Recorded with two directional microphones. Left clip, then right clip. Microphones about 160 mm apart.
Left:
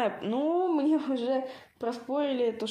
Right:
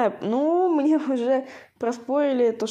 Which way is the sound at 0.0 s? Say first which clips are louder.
Right 6 dB; 40° right (ahead or behind).